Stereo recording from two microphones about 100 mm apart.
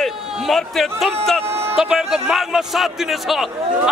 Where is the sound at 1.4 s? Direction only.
25° right (ahead or behind).